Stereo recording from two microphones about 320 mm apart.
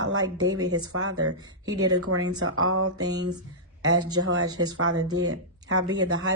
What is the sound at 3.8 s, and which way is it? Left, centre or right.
Speech, right.